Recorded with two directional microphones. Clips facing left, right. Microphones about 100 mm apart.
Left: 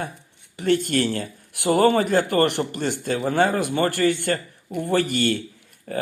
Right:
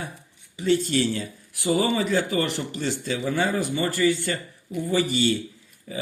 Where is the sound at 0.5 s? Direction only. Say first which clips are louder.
Left 1 dB; 55° left (ahead or behind).